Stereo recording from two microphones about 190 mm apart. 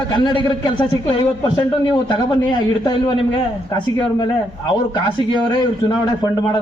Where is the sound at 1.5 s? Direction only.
25° left (ahead or behind).